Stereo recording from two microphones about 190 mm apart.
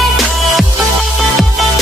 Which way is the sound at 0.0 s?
Centre (ahead or behind).